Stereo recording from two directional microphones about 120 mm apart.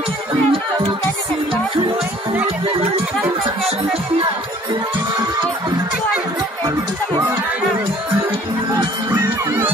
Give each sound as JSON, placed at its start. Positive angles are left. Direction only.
{"t": 0.5, "sound": "music", "side_deg": -45}